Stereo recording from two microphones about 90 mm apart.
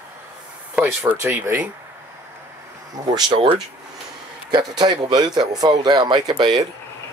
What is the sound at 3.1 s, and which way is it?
Speech, 50° right (ahead or behind).